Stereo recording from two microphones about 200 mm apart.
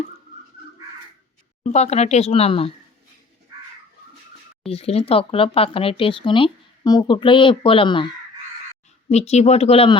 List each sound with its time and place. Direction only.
1.6 s speech: 35° left (ahead or behind)
4.7 s speech: 30° left (ahead or behind)